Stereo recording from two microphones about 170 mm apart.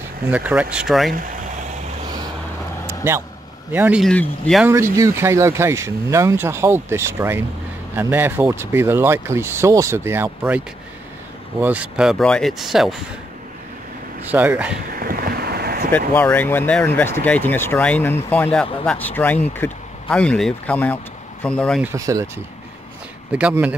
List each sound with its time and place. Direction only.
0.3 s speech: 10° right (ahead or behind)
2.9 s vehicle: 15° right (ahead or behind)
3.7 s speech: 10° right (ahead or behind)
4.0 s speech: 5° left (ahead or behind)
4.6 s speech: 15° right (ahead or behind)
11.6 s speech: 10° right (ahead or behind)
14.3 s speech: 10° right (ahead or behind)
15.0 s boat: 60° right (ahead or behind)
16.2 s speech: 10° left (ahead or behind)
21.8 s speech: 20° right (ahead or behind)